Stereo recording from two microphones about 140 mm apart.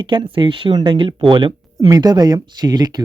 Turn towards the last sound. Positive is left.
turn(degrees=-30)  # may be behind; listen again after turning